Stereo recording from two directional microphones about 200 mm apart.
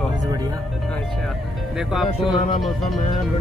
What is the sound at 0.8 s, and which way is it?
Speech, centre (ahead or behind).